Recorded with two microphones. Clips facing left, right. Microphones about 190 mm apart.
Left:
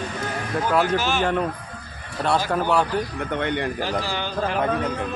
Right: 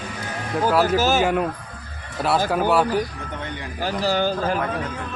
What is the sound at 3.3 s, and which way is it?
Speech, 70° left (ahead or behind).